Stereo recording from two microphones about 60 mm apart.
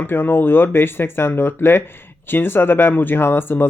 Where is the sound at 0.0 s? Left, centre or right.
Left.